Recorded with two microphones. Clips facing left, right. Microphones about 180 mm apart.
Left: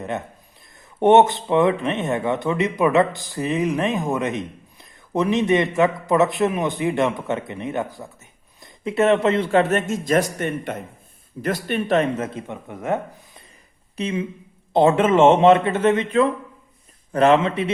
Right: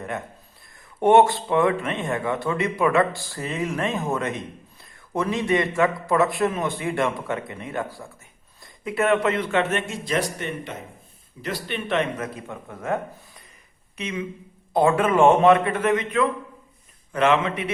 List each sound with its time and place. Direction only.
0.9 s speech: 20° left (ahead or behind); by 12.0 s 45° left (ahead or behind)
12.1 s speech: 25° left (ahead or behind)
13.9 s speech: 30° left (ahead or behind)